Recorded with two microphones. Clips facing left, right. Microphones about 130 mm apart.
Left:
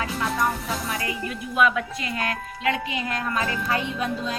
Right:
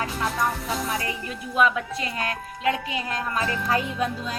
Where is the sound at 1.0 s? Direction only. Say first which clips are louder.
Left 2 dB; 30° right (ahead or behind).